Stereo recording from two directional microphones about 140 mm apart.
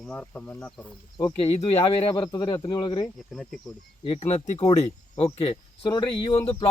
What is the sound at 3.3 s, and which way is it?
Speech, 5° left (ahead or behind).